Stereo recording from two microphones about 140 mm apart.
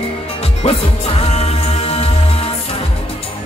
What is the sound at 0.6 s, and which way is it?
Music, 45° left (ahead or behind).